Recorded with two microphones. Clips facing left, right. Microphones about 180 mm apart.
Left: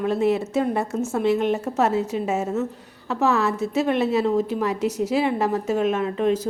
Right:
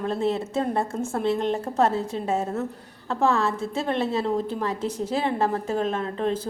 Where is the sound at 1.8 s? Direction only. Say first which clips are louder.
Left 1 dB; 10° left (ahead or behind).